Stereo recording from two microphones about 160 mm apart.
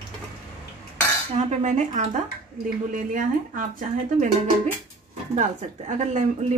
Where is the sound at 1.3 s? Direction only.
45° right (ahead or behind).